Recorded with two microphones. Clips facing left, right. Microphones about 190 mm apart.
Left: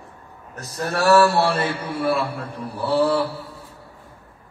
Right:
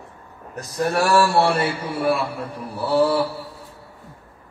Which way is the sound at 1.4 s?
10° right (ahead or behind).